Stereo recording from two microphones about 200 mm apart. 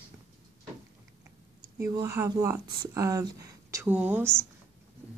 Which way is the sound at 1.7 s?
10° right (ahead or behind).